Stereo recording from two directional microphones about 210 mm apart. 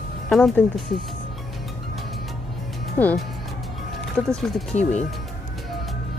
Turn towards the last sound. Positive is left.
turn(degrees=35)  # may be behind; listen again after turning